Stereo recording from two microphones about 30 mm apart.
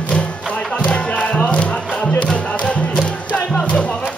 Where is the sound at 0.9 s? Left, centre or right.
Left.